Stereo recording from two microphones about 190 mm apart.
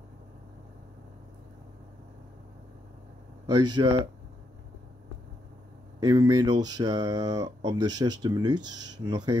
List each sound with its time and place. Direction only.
3.4 s speech: 25° right (ahead or behind)
5.9 s speech: 20° right (ahead or behind)